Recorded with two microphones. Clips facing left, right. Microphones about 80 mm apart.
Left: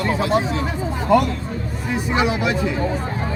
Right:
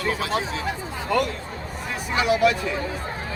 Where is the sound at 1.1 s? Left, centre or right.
Centre.